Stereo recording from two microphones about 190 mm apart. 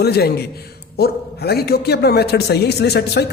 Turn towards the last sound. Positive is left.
turn(degrees=60)  # may be behind; listen again after turning